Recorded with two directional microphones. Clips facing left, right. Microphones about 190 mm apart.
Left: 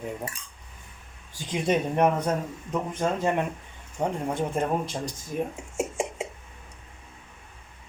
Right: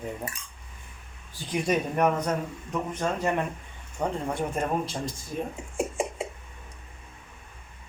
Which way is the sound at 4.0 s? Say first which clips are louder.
Left 1 dB; 15° left (ahead or behind).